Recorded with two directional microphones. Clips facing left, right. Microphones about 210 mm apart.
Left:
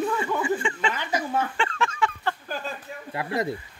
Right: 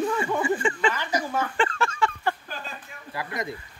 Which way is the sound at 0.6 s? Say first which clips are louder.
Right 3 dB; 40° right (ahead or behind).